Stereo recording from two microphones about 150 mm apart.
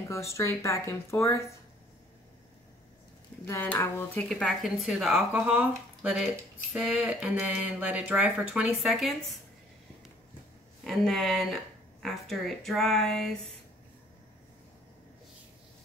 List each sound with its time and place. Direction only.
0.1 s speech: 20° left (ahead or behind)
3.4 s speech: 20° left (ahead or behind)
4.3 s speech: centre (ahead or behind)
10.8 s speech: centre (ahead or behind)